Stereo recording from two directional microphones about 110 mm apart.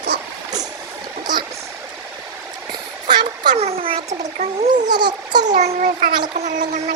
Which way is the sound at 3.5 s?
70° right (ahead or behind).